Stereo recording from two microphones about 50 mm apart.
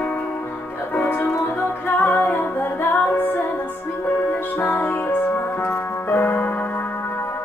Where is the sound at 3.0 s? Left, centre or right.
Left.